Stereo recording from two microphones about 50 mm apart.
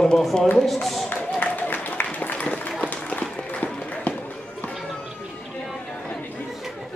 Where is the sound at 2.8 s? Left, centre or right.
Left.